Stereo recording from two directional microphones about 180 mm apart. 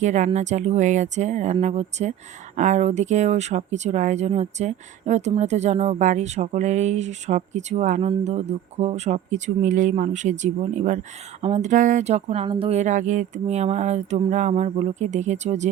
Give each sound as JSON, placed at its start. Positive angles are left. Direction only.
{"t": 0.0, "sound": "speech", "side_deg": -40}